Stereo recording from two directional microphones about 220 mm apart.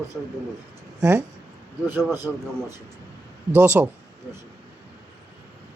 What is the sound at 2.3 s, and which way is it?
Speech, 5° left (ahead or behind).